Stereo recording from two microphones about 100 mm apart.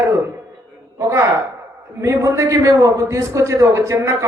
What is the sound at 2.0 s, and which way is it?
A man's voice, 30° right (ahead or behind).